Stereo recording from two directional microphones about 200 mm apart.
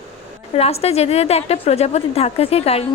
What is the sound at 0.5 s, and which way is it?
A woman's voice, 30° left (ahead or behind).